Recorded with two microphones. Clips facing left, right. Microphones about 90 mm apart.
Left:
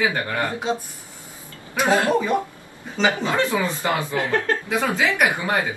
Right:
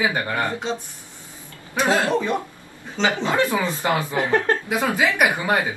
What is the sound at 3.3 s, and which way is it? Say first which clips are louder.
Speech: right 1 dB; 15° right (ahead or behind).